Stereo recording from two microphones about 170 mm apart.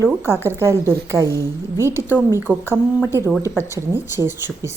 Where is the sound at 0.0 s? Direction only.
15° right (ahead or behind).